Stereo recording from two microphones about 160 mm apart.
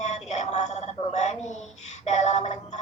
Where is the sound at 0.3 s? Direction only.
45° left (ahead or behind).